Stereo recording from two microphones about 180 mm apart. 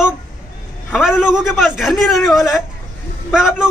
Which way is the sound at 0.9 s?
5° right (ahead or behind).